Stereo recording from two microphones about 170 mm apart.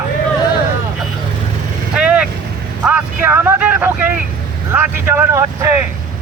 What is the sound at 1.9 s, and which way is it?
Vehicle, 5° right (ahead or behind).